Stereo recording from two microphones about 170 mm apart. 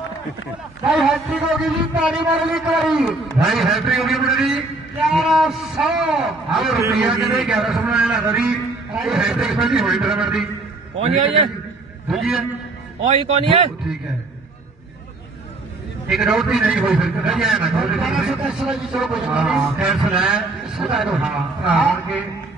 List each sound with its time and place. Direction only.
0.8 s a man's voice: 5° right (ahead or behind)
12.1 s a man's voice: centre (ahead or behind)
13.1 s speech: 35° right (ahead or behind)
16.1 s a man's voice: 5° right (ahead or behind)